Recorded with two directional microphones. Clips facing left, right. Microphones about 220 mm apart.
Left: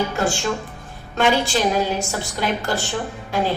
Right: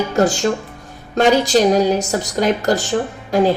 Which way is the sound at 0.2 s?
40° right (ahead or behind).